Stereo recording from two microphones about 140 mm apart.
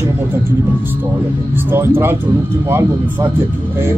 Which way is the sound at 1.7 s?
15° right (ahead or behind).